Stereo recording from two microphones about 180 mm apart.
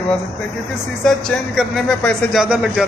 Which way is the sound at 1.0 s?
Centre (ahead or behind).